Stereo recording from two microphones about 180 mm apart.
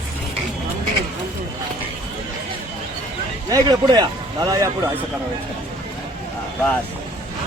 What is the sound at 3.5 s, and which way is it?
Speech, 20° right (ahead or behind).